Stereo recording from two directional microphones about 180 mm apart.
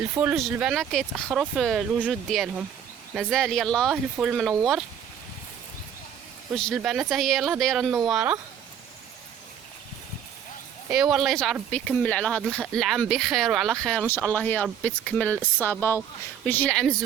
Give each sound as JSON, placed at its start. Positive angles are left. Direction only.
{"t": 0.3, "sound": "speech", "side_deg": 0}
{"t": 6.7, "sound": "speech", "side_deg": -5}
{"t": 7.9, "sound": "speech", "side_deg": -20}
{"t": 8.1, "sound": "speech", "side_deg": -10}
{"t": 10.8, "sound": "speech", "side_deg": 0}